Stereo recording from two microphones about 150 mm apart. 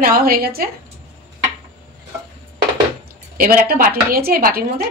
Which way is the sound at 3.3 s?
80° right.